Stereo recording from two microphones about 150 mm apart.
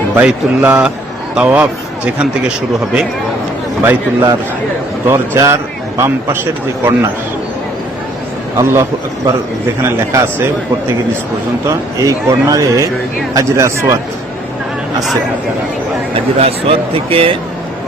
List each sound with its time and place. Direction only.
0.1 s a man's voice: 10° right (ahead or behind)
3.8 s a man's voice: 15° right (ahead or behind)
8.5 s a man's voice: 20° right (ahead or behind)
11.7 s a man's voice: 20° right (ahead or behind)
16.4 s speech: 40° right (ahead or behind)